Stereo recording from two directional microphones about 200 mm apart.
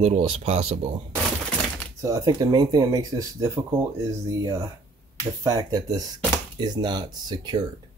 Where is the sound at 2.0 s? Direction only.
15° right (ahead or behind).